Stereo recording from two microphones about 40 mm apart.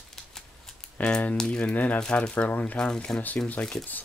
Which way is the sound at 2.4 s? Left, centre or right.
Left.